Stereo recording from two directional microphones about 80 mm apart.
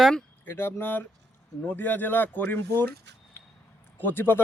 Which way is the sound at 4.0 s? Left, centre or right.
Left.